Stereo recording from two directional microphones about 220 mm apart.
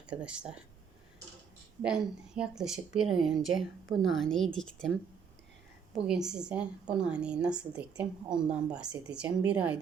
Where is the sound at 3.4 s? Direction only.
60° right (ahead or behind).